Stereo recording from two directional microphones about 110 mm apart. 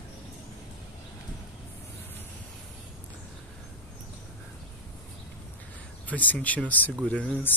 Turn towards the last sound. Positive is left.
turn(degrees=10)  # may be behind; listen again after turning